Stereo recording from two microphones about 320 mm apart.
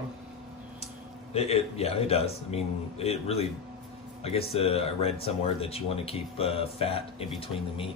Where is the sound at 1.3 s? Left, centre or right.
Centre.